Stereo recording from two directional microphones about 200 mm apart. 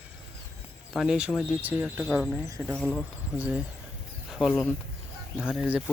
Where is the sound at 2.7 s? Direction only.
5° left (ahead or behind).